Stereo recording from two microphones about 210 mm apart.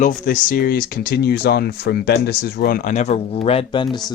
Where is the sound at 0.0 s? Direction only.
40° left (ahead or behind); by 3.8 s 25° left (ahead or behind).